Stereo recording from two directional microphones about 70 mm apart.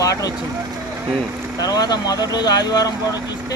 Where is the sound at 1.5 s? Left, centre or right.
Left.